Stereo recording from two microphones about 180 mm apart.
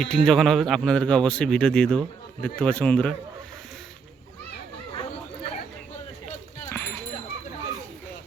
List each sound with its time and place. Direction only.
0.0 s speech: centre (ahead or behind)
4.9 s chatter: 30° left (ahead or behind)
6.7 s a sound: 15° left (ahead or behind)